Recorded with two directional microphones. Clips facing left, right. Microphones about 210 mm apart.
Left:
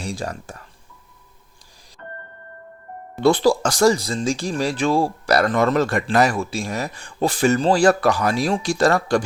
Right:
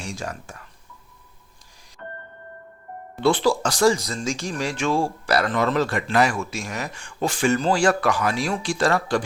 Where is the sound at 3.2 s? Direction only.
40° left (ahead or behind).